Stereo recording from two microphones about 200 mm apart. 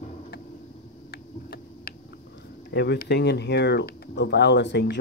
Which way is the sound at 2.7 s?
55° left (ahead or behind).